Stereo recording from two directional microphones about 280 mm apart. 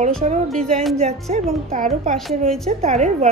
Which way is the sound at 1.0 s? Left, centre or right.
Right.